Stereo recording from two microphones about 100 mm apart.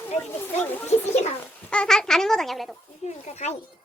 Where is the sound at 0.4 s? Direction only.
20° left (ahead or behind).